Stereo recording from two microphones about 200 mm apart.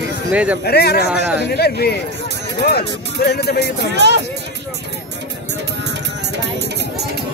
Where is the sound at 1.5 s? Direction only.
50° left (ahead or behind).